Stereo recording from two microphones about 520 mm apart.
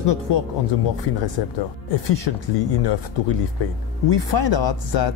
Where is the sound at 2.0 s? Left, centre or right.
Left.